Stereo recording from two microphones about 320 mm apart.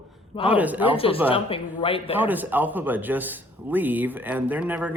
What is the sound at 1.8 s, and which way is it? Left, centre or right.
Speech, centre.